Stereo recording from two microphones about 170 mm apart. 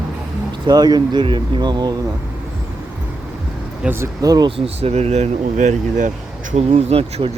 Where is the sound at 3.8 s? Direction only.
15° right (ahead or behind).